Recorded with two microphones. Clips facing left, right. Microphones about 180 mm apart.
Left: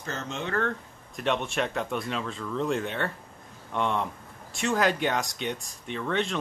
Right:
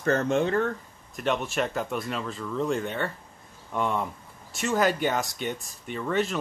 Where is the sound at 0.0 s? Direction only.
55° right (ahead or behind).